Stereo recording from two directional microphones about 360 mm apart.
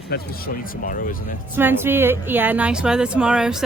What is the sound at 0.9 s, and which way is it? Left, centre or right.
Speech, left.